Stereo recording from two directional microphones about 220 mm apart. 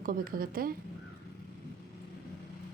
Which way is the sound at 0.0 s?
40° right (ahead or behind).